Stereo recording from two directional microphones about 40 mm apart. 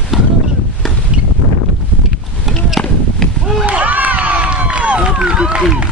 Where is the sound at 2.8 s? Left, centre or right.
Left.